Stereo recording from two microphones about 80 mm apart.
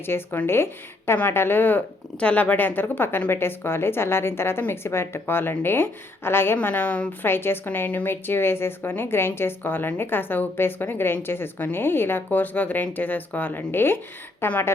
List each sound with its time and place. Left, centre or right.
0.0 s a woman's voice: left
7.3 s a woman's voice: left